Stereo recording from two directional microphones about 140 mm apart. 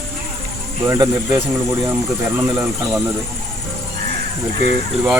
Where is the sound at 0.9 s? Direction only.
30° right (ahead or behind).